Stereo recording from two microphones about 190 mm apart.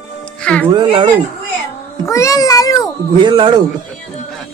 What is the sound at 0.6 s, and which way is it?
Speech, 25° right (ahead or behind).